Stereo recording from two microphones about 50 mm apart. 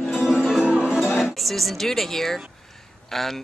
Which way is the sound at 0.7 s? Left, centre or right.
Centre.